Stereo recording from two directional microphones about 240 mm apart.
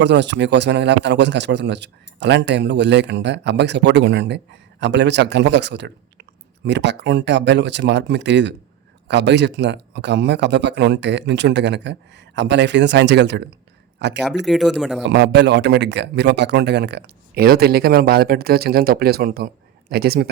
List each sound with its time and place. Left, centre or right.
0.0 s speech: right
14.4 s speech: centre
15.0 s speech: right